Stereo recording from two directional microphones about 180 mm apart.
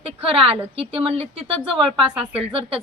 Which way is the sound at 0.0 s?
30° right (ahead or behind).